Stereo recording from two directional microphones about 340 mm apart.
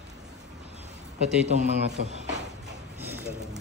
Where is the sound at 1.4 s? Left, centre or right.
Centre.